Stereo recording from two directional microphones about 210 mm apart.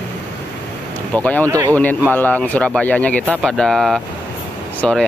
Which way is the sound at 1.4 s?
15° right (ahead or behind).